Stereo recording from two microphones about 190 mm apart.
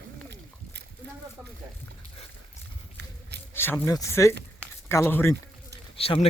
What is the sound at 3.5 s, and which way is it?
Speech, 10° left (ahead or behind).